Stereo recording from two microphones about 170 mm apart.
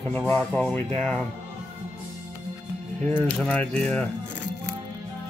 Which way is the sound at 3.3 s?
5° left (ahead or behind).